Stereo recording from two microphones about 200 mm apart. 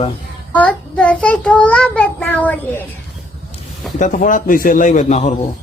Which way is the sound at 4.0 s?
40° left (ahead or behind).